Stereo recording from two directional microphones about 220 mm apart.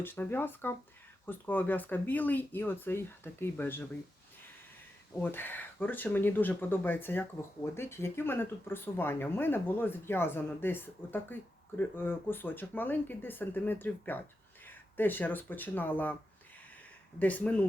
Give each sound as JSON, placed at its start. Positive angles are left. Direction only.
{"t": 0.0, "sound": "speech", "side_deg": 10}
{"t": 5.2, "sound": "speech", "side_deg": 10}
{"t": 17.2, "sound": "speech", "side_deg": 5}